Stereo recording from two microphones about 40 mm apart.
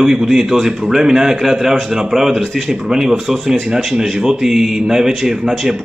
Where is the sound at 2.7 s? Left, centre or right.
Centre.